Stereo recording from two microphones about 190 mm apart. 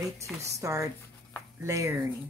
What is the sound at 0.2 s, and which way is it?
A woman's voice, 15° right (ahead or behind).